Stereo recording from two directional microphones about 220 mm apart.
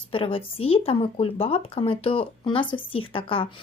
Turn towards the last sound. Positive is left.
turn(degrees=25)  # may be behind; listen again after turning